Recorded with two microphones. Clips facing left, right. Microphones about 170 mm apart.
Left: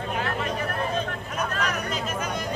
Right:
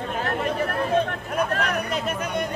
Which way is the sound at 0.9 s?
60° right (ahead or behind).